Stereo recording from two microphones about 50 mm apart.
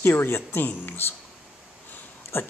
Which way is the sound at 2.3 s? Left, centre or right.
Left.